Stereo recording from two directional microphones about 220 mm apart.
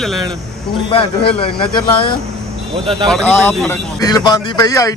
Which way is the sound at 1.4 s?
25° left (ahead or behind).